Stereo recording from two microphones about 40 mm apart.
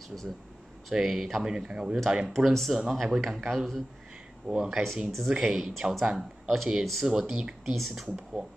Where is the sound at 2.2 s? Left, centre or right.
Centre.